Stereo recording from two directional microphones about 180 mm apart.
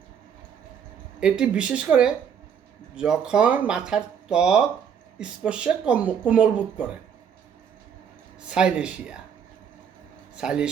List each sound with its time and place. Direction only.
1.2 s speech: 5° right (ahead or behind)
8.4 s speech: 5° right (ahead or behind)
10.3 s speech: 5° right (ahead or behind)